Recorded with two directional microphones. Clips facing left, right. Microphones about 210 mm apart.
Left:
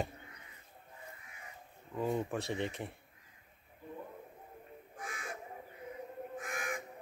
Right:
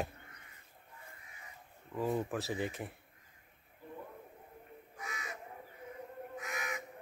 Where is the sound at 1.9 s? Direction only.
Centre (ahead or behind).